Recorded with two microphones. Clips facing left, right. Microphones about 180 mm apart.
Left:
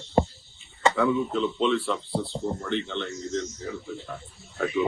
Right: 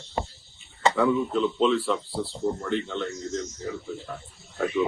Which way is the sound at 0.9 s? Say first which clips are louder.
Right 4 dB; centre (ahead or behind).